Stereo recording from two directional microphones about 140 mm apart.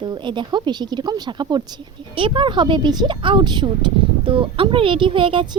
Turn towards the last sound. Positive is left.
turn(degrees=-40)  # may be behind; listen again after turning